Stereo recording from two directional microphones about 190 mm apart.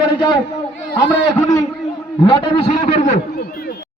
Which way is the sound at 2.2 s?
30° left (ahead or behind).